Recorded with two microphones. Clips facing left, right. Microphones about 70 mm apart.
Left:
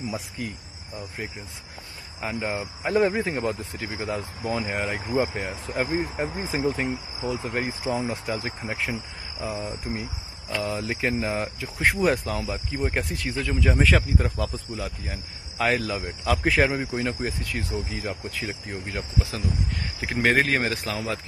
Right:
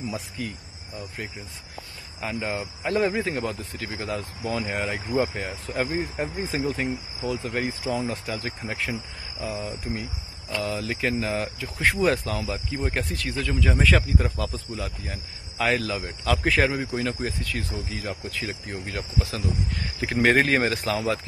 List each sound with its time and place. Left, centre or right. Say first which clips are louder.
0.4 s speech: right 1 dB; centre
2.1 s speech: even; centre
3.3 s speech: left 1 dB; centre
12.4 s speech: left 1 dB; centre
18.9 s speech: even; centre
20.0 s speech: right 2 dB; centre